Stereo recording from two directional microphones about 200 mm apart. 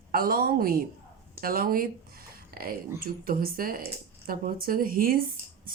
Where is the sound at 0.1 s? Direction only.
50° right (ahead or behind).